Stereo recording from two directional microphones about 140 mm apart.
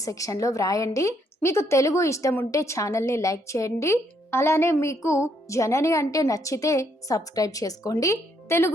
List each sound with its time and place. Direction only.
0.0 s a woman's voice: 25° left (ahead or behind)